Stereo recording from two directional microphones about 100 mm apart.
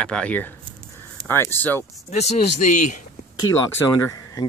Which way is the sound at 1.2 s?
25° left (ahead or behind).